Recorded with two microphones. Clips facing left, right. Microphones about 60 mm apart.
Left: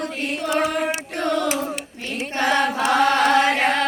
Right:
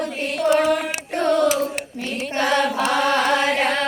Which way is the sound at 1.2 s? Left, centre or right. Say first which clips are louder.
Right 4 dB; centre.